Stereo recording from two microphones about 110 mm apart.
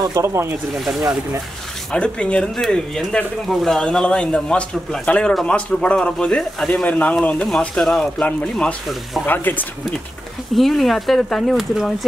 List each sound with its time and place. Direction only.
0.0 s speech: 30° right (ahead or behind)
0.7 s speech: 5° right (ahead or behind)
1.9 s speech: 10° left (ahead or behind)
10.5 s speech: centre (ahead or behind)